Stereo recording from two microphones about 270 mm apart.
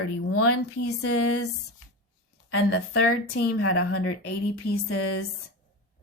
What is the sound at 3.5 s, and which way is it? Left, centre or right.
Speech, left.